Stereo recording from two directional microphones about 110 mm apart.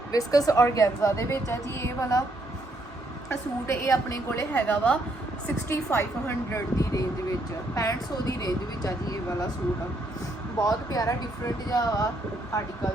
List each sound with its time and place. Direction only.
0.1 s a woman's voice: 35° left (ahead or behind)
3.2 s a woman's voice: 25° left (ahead or behind)
4.3 s a woman's voice: 20° left (ahead or behind); by 9.5 s 35° left (ahead or behind)
10.6 s a woman's voice: 35° left (ahead or behind)